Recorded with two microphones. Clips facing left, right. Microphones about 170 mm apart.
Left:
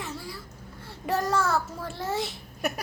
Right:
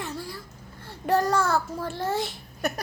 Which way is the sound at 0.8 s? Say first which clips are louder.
Right 5 dB; centre (ahead or behind).